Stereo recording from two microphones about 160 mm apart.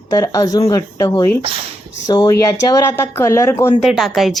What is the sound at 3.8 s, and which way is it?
Speech, centre (ahead or behind).